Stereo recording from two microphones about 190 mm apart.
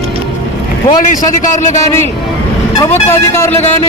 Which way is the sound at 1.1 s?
40° left (ahead or behind).